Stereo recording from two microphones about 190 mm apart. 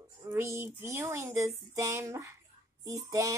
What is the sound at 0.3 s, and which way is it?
Speech, 15° right (ahead or behind).